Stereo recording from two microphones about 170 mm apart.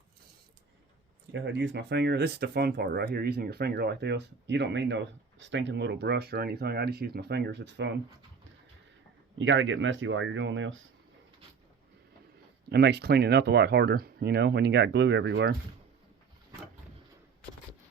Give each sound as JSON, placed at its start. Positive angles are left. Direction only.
{"t": 1.3, "sound": "speech", "side_deg": -90}
{"t": 9.4, "sound": "speech", "side_deg": -90}
{"t": 12.7, "sound": "speech", "side_deg": -75}